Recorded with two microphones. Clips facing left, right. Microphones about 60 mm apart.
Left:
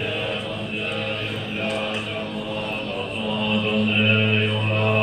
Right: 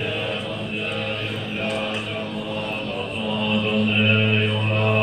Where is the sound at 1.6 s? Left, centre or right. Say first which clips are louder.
Even; centre.